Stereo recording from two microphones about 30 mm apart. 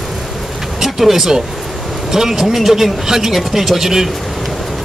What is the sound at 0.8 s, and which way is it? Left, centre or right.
Speech, centre.